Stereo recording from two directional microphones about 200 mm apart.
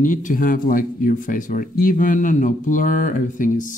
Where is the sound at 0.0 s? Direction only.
40° left (ahead or behind).